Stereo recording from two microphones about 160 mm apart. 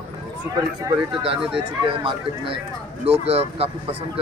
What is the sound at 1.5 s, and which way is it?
Speech, 35° right (ahead or behind).